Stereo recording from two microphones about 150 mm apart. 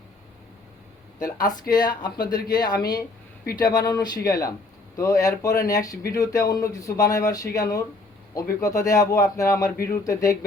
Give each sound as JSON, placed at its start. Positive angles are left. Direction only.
{"t": 1.7, "sound": "a man's voice", "side_deg": 30}
{"t": 9.7, "sound": "speech", "side_deg": 80}
{"t": 10.0, "sound": "a man's voice", "side_deg": 20}